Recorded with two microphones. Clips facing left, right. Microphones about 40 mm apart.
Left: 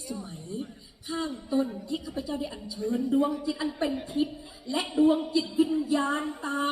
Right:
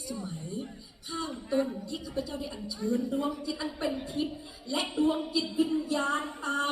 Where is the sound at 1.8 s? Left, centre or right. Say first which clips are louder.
Left 2 dB; centre.